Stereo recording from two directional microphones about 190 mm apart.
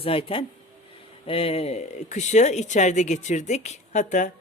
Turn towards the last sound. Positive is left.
turn(degrees=40)  # may be behind; listen again after turning